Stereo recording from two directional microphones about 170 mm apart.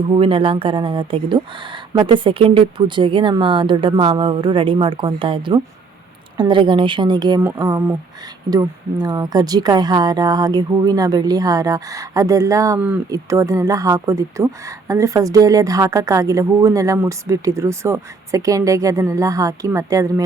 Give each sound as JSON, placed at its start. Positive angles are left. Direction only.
{"t": 0.2, "sound": "speech", "side_deg": -30}